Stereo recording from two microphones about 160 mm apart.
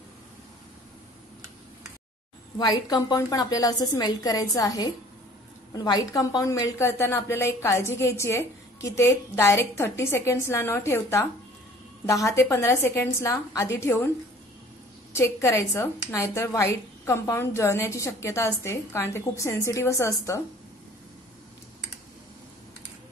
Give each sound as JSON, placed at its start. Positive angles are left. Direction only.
{"t": 2.6, "sound": "a woman's voice", "side_deg": 25}
{"t": 15.1, "sound": "a woman's voice", "side_deg": 15}